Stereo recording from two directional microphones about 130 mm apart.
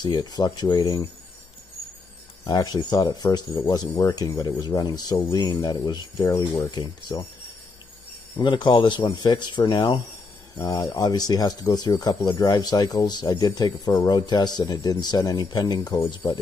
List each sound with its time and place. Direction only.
0.0 s speech: 30° left (ahead or behind)
2.4 s speech: 30° left (ahead or behind)
8.4 s speech: 35° left (ahead or behind)